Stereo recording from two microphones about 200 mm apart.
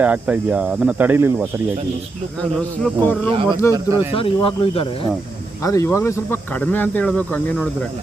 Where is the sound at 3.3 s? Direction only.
25° right (ahead or behind).